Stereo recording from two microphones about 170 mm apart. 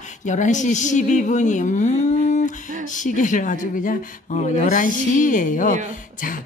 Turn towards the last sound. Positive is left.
turn(degrees=50)  # may be behind; listen again after turning